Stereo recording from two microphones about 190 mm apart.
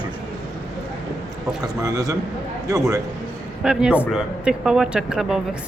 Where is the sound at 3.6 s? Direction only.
5° right (ahead or behind).